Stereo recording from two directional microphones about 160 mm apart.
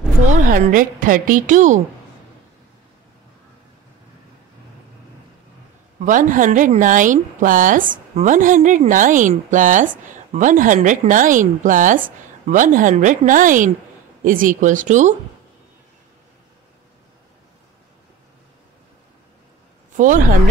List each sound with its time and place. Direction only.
0.3 s a woman's voice: 60° right (ahead or behind)
5.9 s a woman's voice: 55° right (ahead or behind)